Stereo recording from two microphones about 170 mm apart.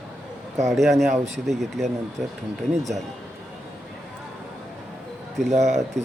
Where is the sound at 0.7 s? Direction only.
Centre (ahead or behind).